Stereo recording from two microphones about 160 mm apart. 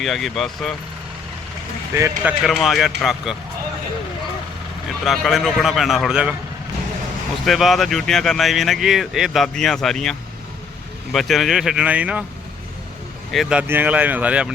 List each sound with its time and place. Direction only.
0.0 s speech: centre (ahead or behind)
2.0 s speech: 20° right (ahead or behind)
2.4 s speech: centre (ahead or behind)
5.0 s speech: centre (ahead or behind)
7.4 s speech: centre (ahead or behind)
13.3 s speech: 5° right (ahead or behind)